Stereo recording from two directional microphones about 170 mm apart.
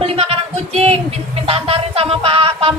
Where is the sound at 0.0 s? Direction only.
35° right (ahead or behind).